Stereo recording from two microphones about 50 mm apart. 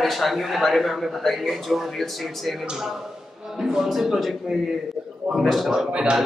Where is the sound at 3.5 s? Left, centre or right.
Centre.